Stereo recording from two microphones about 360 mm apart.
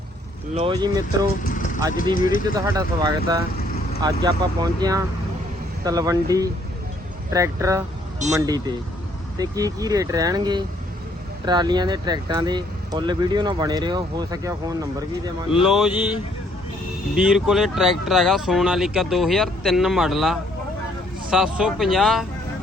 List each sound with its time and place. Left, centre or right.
0.5 s speech: centre
1.5 s vehicle: left
2.6 s speech: centre
17.2 s speech: centre